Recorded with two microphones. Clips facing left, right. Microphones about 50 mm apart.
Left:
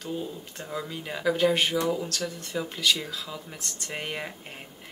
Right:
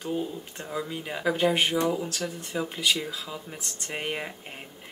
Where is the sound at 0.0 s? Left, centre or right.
Centre.